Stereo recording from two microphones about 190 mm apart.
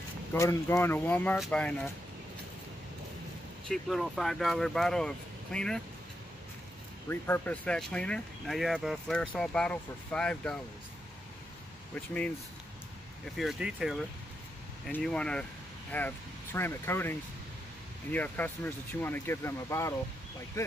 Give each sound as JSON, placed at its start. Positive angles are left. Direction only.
{"t": 0.3, "sound": "speech", "side_deg": 15}
{"t": 3.6, "sound": "speech", "side_deg": 0}
{"t": 7.1, "sound": "speech", "side_deg": 10}
{"t": 11.9, "sound": "speech", "side_deg": 5}